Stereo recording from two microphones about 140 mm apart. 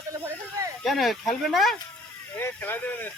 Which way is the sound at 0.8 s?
Centre (ahead or behind).